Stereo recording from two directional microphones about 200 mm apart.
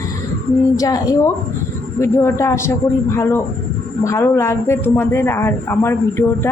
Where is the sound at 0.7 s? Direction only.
15° left (ahead or behind).